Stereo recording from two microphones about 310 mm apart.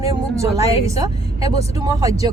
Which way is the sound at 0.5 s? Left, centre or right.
Centre.